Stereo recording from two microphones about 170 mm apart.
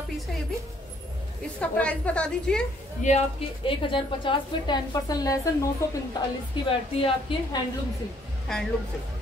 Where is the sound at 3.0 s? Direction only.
45° left (ahead or behind).